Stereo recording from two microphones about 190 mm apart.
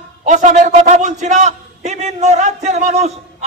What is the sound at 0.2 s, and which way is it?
A man's voice, 40° right (ahead or behind).